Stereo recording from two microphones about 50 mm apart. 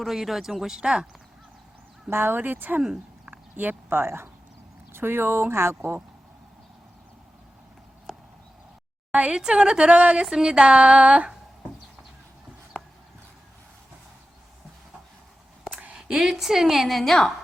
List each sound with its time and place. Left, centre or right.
0.0 s a woman's voice: centre
2.0 s speech: right
9.3 s a woman's voice: centre
10.2 s a woman's voice: centre
15.7 s a sound: right
16.0 s a woman's voice: centre